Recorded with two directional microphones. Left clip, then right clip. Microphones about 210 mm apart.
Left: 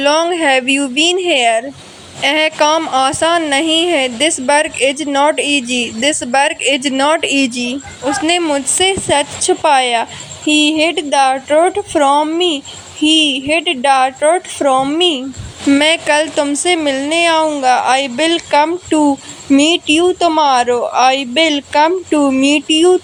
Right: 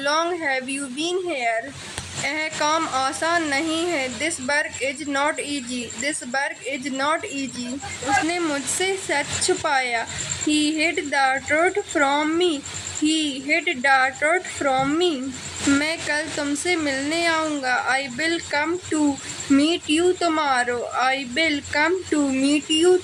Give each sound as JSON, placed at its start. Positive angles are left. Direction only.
{"t": 0.0, "sound": "a woman's voice", "side_deg": 30}
{"t": 15.7, "sound": "a woman's voice", "side_deg": 35}
{"t": 22.4, "sound": "speech", "side_deg": -5}